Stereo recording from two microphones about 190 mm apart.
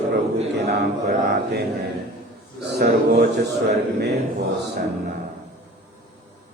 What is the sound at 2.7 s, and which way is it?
Mantra, 60° right (ahead or behind).